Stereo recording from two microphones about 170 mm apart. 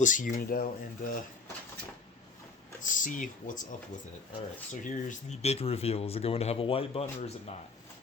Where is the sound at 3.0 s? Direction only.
50° left (ahead or behind).